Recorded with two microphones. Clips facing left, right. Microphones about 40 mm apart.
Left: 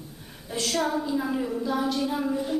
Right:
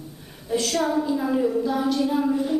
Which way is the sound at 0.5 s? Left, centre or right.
Centre.